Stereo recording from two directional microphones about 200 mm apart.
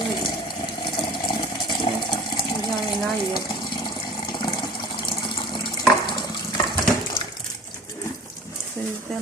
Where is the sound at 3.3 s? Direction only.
20° left (ahead or behind).